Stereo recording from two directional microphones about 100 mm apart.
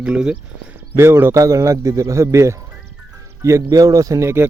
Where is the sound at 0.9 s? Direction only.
25° right (ahead or behind).